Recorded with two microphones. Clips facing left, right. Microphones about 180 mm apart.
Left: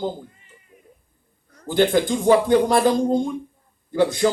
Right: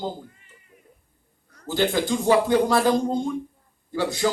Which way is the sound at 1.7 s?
55° left (ahead or behind).